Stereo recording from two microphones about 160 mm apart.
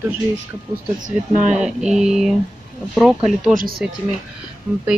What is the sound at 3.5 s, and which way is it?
Speech, 65° right (ahead or behind).